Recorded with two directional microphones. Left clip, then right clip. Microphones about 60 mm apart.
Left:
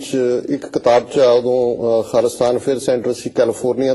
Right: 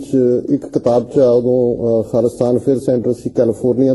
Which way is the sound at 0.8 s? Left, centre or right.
Right.